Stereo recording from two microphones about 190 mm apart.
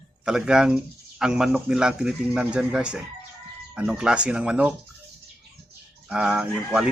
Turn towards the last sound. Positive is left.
turn(degrees=-5)  # may be behind; listen again after turning